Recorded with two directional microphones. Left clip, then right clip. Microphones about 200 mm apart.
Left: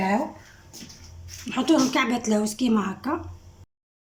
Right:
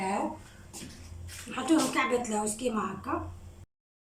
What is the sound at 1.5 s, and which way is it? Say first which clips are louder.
Speech: left 6 dB; 45° left (ahead or behind).